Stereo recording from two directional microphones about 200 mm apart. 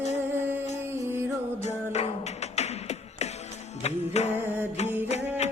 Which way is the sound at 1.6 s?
35° left (ahead or behind).